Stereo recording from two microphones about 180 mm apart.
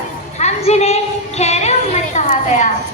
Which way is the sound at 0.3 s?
40° left (ahead or behind).